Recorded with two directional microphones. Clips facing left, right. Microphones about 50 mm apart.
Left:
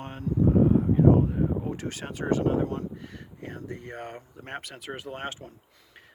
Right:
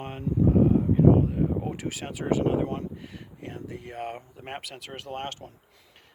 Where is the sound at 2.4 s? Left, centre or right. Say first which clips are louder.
Even; right.